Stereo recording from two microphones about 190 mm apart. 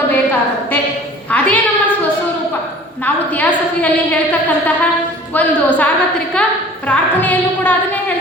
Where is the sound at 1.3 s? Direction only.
5° left (ahead or behind).